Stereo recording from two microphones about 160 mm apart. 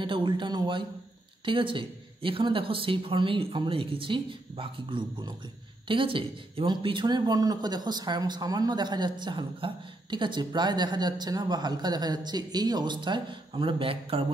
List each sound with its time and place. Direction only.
0.0 s speech: 30° right (ahead or behind)